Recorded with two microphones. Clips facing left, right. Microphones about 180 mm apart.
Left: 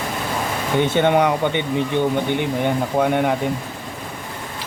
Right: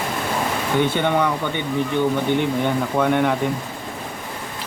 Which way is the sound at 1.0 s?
20° left (ahead or behind).